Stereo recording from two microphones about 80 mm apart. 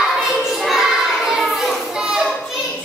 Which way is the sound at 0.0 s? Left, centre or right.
Centre.